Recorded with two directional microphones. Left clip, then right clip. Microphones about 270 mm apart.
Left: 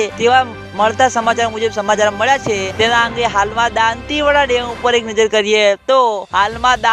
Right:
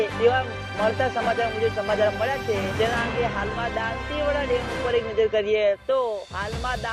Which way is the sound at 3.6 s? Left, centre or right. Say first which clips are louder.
Left 13 dB; left.